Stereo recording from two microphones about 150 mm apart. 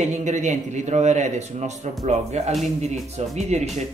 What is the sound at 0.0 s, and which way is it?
A man's voice, 55° right (ahead or behind).